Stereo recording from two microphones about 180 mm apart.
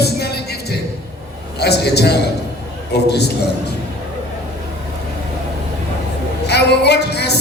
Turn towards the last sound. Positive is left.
turn(degrees=65)  # may be behind; listen again after turning